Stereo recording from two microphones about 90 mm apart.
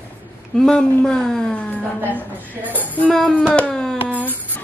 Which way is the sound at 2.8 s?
15° left (ahead or behind).